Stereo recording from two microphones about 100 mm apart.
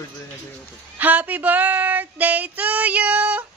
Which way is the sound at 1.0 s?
15° right (ahead or behind).